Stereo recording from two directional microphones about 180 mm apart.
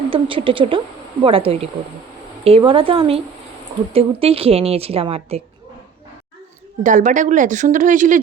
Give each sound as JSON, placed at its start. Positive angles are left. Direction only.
{"t": 0.1, "sound": "a woman's voice", "side_deg": -30}
{"t": 6.8, "sound": "speech", "side_deg": -45}